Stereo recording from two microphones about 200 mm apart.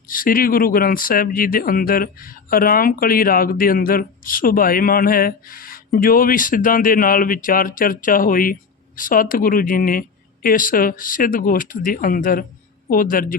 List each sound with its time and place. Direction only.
0.1 s speech: 45° left (ahead or behind)